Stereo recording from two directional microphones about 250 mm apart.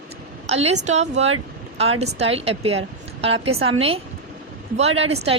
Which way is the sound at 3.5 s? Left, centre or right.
Right.